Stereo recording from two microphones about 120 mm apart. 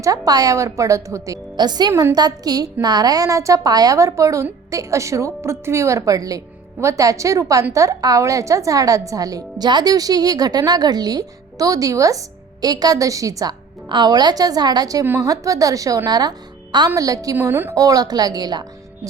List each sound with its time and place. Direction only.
0.0 s a woman's voice: 30° right (ahead or behind)
1.9 s a woman's voice: 20° right (ahead or behind)
2.1 s a woman's voice: 35° right (ahead or behind)
15.0 s a woman's voice: 20° right (ahead or behind)
15.3 s a woman's voice: 30° right (ahead or behind)
17.3 s a woman's voice: 20° right (ahead or behind)
17.7 s a woman's voice: 30° right (ahead or behind)